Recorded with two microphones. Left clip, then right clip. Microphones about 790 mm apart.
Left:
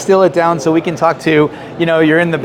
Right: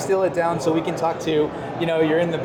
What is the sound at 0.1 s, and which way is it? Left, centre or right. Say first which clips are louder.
Speech: left 11 dB; left.